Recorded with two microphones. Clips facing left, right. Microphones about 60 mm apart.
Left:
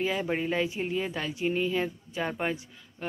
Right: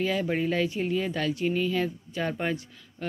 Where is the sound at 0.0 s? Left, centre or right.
Centre.